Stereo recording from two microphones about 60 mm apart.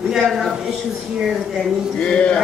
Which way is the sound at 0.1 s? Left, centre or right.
Centre.